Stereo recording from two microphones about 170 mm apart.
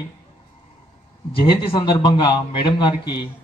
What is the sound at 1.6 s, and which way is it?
A man's voice, 30° left (ahead or behind).